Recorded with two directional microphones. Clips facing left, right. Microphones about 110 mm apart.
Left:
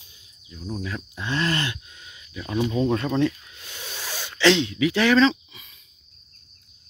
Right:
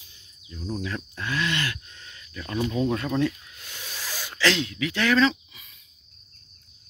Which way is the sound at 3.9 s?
Centre (ahead or behind).